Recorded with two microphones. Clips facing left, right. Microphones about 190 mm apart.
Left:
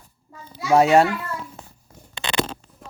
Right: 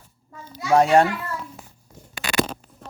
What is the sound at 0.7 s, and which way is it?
Speech, 5° left (ahead or behind).